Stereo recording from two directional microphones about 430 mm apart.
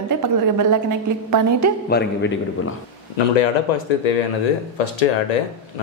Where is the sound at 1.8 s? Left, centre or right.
Left.